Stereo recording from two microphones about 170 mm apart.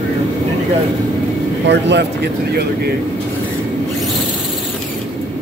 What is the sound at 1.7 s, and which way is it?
Speech, 90° right.